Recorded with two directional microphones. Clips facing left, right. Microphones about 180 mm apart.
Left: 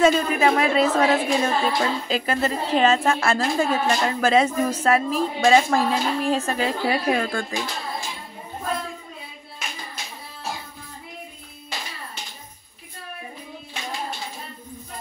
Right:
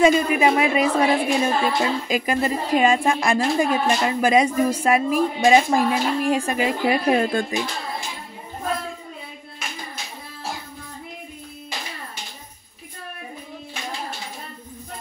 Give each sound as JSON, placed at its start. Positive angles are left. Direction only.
{"t": 0.0, "sound": "a woman's voice", "side_deg": -10}
{"t": 7.1, "sound": "speech", "side_deg": -25}